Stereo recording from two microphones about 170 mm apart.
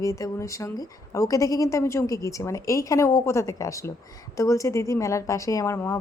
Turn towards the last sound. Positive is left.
turn(degrees=15)  # may be behind; listen again after turning